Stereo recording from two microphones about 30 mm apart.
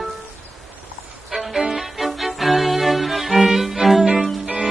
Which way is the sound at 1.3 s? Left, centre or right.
Centre.